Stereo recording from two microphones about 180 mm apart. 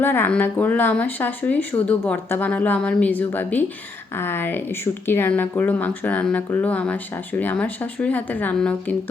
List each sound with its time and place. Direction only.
0.0 s speech: 10° left (ahead or behind)